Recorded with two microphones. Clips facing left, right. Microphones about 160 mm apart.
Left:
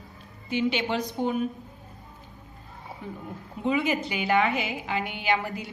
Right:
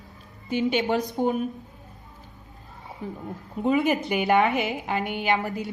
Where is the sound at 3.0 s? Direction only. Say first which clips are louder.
Right 4 dB; 40° right (ahead or behind).